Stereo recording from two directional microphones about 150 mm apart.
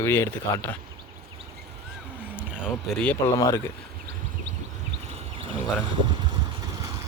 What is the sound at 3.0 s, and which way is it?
Speech, 10° left (ahead or behind).